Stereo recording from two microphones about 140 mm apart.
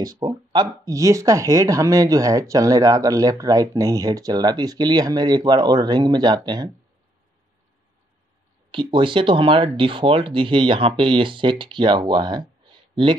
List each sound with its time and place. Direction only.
0.0 s speech: 30° right (ahead or behind)
8.7 s speech: 35° right (ahead or behind)